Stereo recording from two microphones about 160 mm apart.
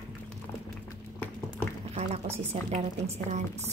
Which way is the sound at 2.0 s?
45° right (ahead or behind).